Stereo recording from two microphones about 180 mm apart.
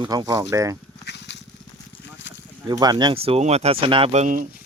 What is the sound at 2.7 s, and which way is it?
Speech, 25° right (ahead or behind).